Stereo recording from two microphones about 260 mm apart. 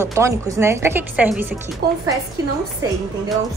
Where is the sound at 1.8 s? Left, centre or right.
Right.